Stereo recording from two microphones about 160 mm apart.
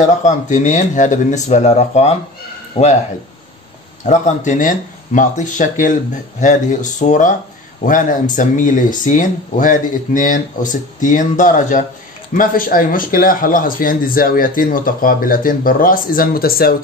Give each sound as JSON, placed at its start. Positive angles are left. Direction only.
{"t": 0.2, "sound": "speech", "side_deg": 50}
{"t": 4.0, "sound": "speech", "side_deg": 50}